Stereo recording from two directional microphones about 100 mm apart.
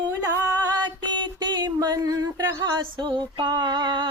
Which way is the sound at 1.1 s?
50° right (ahead or behind).